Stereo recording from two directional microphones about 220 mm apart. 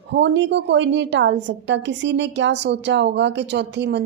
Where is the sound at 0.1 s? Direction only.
55° right (ahead or behind).